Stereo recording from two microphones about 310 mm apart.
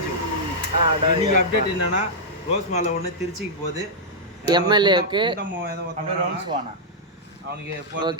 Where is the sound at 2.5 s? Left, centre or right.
Left.